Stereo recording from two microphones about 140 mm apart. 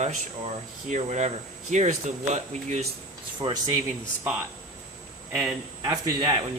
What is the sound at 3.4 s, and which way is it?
Speech, 35° right (ahead or behind).